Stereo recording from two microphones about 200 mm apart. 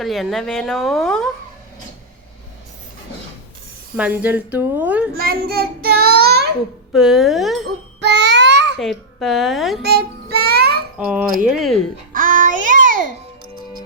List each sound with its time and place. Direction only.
0.0 s speech: centre (ahead or behind)
3.9 s speech: 5° right (ahead or behind)
5.1 s a child's voice: 50° right (ahead or behind)
5.8 s child singing: 50° right (ahead or behind)
6.9 s speech: centre (ahead or behind)
8.0 s a sound: 60° right (ahead or behind)
8.8 s speech: centre (ahead or behind)
9.8 s child singing: 55° right (ahead or behind)
10.9 s speech: 5° right (ahead or behind)
12.1 s child singing: 40° right (ahead or behind)